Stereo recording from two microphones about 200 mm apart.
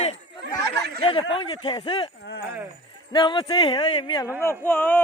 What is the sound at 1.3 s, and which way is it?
Speech, 25° left (ahead or behind).